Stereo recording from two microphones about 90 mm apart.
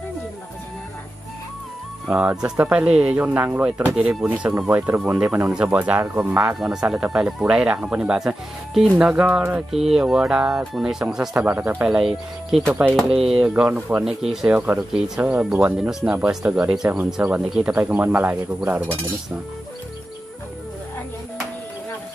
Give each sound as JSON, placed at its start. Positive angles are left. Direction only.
{"t": 2.0, "sound": "speech", "side_deg": -15}
{"t": 6.4, "sound": "speech", "side_deg": -5}
{"t": 9.7, "sound": "speech", "side_deg": -5}
{"t": 11.3, "sound": "speech", "side_deg": -20}